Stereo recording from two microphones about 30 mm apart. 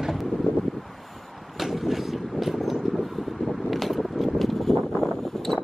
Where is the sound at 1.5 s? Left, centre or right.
Centre.